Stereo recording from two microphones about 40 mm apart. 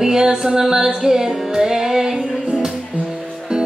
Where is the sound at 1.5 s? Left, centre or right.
Centre.